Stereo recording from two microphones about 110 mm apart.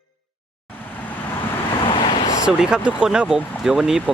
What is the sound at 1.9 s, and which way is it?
Vehicle, 45° left (ahead or behind).